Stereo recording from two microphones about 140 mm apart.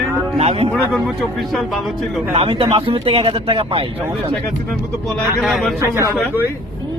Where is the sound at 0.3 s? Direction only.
50° right (ahead or behind).